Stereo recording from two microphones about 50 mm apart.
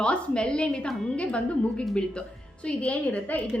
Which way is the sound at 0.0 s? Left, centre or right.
Centre.